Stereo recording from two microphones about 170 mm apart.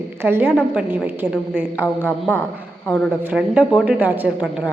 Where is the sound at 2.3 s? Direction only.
10° left (ahead or behind).